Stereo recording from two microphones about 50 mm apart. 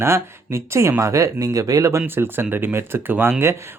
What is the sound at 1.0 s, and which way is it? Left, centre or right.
Speech, right.